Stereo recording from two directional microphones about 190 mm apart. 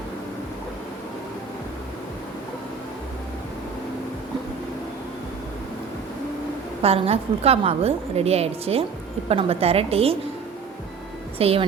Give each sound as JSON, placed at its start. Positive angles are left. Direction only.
{"t": 6.8, "sound": "a woman's voice", "side_deg": -30}
{"t": 11.3, "sound": "a woman's voice", "side_deg": -30}